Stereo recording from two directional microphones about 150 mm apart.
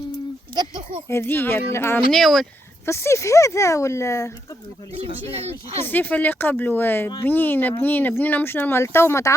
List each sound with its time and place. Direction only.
0.5 s a sound: 30° right (ahead or behind)
1.0 s speech: 15° left (ahead or behind)
2.1 s speech: centre (ahead or behind)
2.8 s speech: 15° left (ahead or behind)
5.3 s speech: 45° right (ahead or behind)
5.8 s speech: 10° left (ahead or behind)